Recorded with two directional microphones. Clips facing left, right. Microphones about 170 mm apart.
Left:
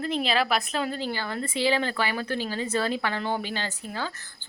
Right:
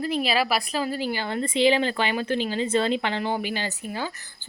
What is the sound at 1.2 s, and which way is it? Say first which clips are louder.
A woman's voice: right 6 dB; 25° right (ahead or behind).